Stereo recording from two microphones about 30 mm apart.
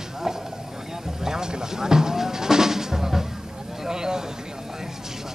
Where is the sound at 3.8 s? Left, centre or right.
Right.